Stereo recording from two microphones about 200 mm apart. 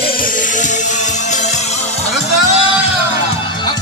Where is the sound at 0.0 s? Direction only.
45° left (ahead or behind).